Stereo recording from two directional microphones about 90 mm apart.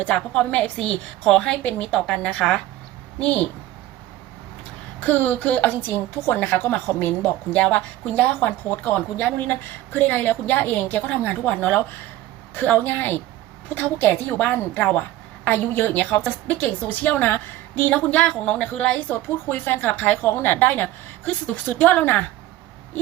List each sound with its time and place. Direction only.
0.0 s a woman's voice: 10° left (ahead or behind)
4.9 s a woman's voice: 20° left (ahead or behind)